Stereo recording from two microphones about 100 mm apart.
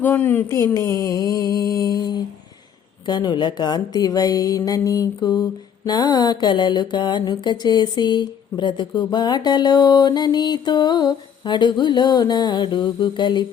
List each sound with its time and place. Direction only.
0.0 s speech: 20° left (ahead or behind)
0.5 s a sound: 30° left (ahead or behind)
3.1 s speech: 45° left (ahead or behind)